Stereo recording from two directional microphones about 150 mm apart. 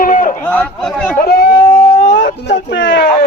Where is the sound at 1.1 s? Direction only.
90° left.